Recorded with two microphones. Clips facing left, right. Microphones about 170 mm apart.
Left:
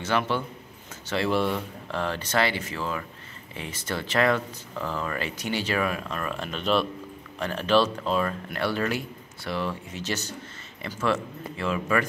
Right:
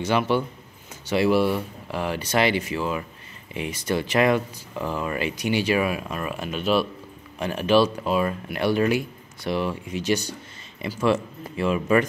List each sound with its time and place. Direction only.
0.0 s speech: 15° right (ahead or behind)